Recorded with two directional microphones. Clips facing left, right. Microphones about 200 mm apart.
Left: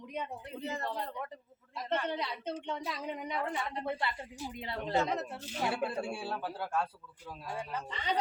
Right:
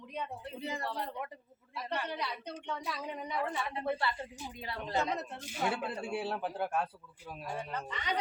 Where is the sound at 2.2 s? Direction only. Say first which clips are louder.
Left 3 dB; 25° left (ahead or behind).